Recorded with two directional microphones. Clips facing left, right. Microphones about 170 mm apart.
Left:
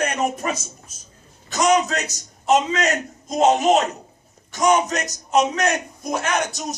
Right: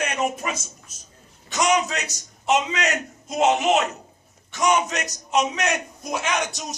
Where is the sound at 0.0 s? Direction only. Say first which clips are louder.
Left 3 dB; 40° left (ahead or behind).